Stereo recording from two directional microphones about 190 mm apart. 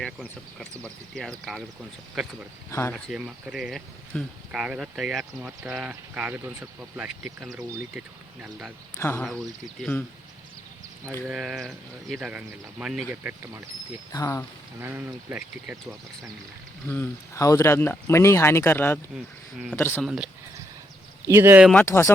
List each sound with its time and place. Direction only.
0.0 s speech: 5° left (ahead or behind)
2.6 s speech: 15° left (ahead or behind)
2.9 s speech: 5° right (ahead or behind)
9.0 s speech: 15° left (ahead or behind)
11.3 s speech: centre (ahead or behind)
14.1 s speech: 15° left (ahead or behind)
14.8 s speech: 10° right (ahead or behind)
16.9 s speech: 15° left (ahead or behind)
20.1 s speech: 5° right (ahead or behind)
21.7 s speech: 10° left (ahead or behind)